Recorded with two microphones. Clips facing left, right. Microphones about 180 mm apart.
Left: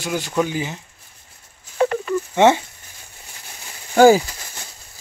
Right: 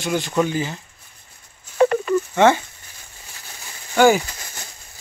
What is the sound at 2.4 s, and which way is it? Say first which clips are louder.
Speech: left 2 dB; 25° left (ahead or behind).